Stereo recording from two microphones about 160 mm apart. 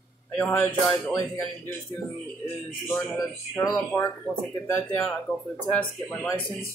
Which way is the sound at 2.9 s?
15° left (ahead or behind).